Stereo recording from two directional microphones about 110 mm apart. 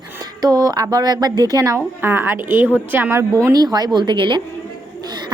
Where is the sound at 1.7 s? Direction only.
20° right (ahead or behind).